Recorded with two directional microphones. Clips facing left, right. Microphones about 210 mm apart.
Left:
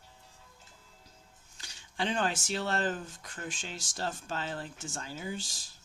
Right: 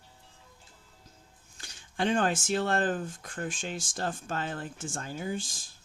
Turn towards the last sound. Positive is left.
turn(degrees=-50)  # may be behind; listen again after turning